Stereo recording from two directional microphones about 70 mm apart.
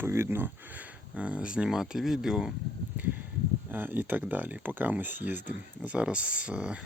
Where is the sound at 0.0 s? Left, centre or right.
Right; by 2.5 s centre.